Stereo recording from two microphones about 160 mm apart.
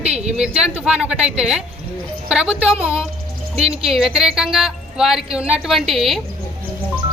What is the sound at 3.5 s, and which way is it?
Speech, 40° right (ahead or behind).